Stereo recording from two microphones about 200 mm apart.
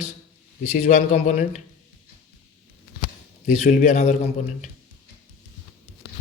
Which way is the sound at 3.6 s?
35° left (ahead or behind).